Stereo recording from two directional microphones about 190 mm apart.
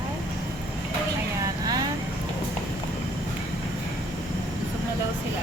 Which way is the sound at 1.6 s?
20° right (ahead or behind).